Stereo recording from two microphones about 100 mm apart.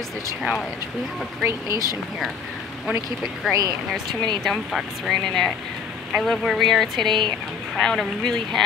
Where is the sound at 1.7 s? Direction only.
40° left (ahead or behind).